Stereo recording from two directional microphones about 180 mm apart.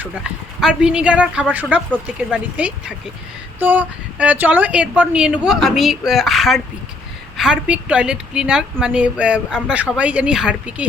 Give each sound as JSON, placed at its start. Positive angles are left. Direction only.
{"t": 0.6, "sound": "speech", "side_deg": -5}